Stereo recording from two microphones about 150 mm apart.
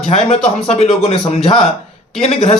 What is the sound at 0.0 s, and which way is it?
Speech, 45° left (ahead or behind).